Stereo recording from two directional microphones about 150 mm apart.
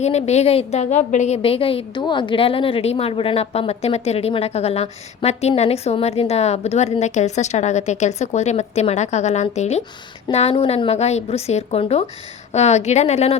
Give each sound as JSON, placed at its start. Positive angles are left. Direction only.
{"t": 0.0, "sound": "a woman's voice", "side_deg": 45}
{"t": 1.4, "sound": "a woman's voice", "side_deg": 40}